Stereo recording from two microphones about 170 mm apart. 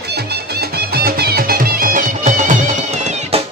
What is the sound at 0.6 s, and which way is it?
Music, 65° right (ahead or behind).